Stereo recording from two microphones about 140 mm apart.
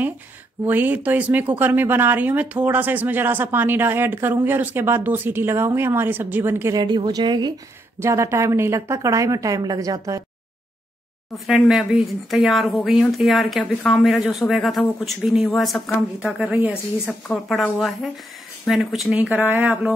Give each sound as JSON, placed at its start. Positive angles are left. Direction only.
{"t": 0.7, "sound": "speech", "side_deg": -15}
{"t": 6.7, "sound": "a woman's voice", "side_deg": -35}
{"t": 8.0, "sound": "a woman's voice", "side_deg": -20}
{"t": 11.3, "sound": "speech", "side_deg": 0}
{"t": 17.3, "sound": "speech", "side_deg": 0}